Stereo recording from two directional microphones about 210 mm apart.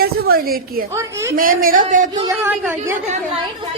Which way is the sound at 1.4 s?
40° right (ahead or behind).